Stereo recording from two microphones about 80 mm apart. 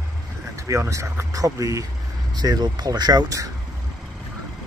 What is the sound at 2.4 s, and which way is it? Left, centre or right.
Speech, right.